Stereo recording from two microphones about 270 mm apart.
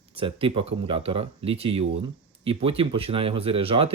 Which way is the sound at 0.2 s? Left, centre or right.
Centre.